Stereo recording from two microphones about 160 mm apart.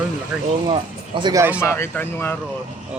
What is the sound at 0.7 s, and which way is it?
Speech, 30° right (ahead or behind).